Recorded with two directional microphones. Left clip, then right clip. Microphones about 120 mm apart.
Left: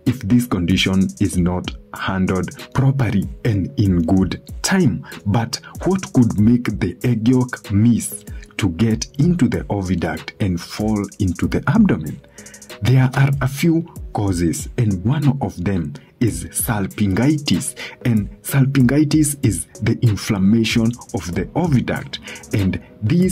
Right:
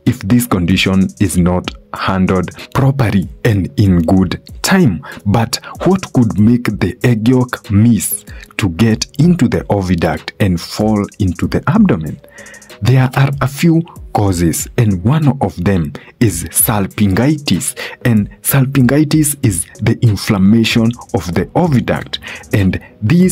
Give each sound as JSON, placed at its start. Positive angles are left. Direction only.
{"t": 0.2, "sound": "speech", "side_deg": -40}
{"t": 5.3, "sound": "speech", "side_deg": -45}
{"t": 6.1, "sound": "speech", "side_deg": 0}
{"t": 6.4, "sound": "speech", "side_deg": -30}
{"t": 6.8, "sound": "speech", "side_deg": -40}
{"t": 7.3, "sound": "speech", "side_deg": -30}
{"t": 21.2, "sound": "speech", "side_deg": -40}